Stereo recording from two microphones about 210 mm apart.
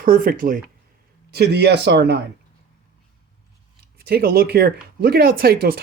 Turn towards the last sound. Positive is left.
turn(degrees=-45)  # may be behind; listen again after turning